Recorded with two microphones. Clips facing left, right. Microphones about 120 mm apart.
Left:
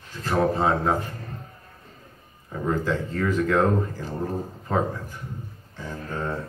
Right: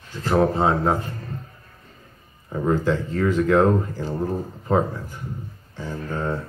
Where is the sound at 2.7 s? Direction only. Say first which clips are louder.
Right 3 dB; 25° right (ahead or behind).